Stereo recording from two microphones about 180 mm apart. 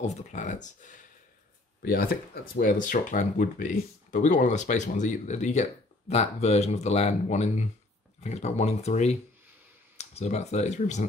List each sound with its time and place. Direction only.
0.0 s speech: 40° left (ahead or behind)
1.8 s speech: 55° left (ahead or behind)
2.5 s speech: 45° left (ahead or behind)